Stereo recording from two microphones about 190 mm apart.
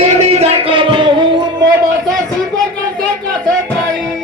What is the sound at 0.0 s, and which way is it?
Music, 30° right (ahead or behind).